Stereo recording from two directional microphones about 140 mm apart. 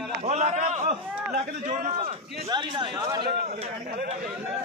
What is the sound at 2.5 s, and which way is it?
Speech, 35° right (ahead or behind).